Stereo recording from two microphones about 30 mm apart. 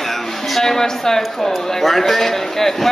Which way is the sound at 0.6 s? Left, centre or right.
Centre.